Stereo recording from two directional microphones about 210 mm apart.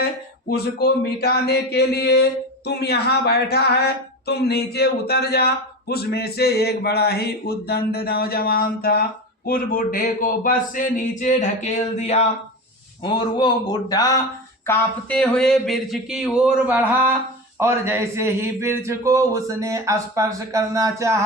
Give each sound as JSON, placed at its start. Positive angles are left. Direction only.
{"t": 0.5, "sound": "speech", "side_deg": 50}
{"t": 14.7, "sound": "speech", "side_deg": 5}